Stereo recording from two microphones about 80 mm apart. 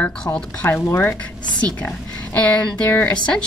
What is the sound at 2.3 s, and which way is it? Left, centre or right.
Speech, centre.